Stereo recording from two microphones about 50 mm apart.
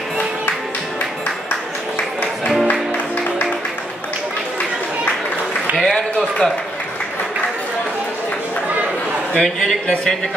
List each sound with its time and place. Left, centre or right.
5.8 s a sound: centre
6.1 s speech: centre
9.3 s speech: centre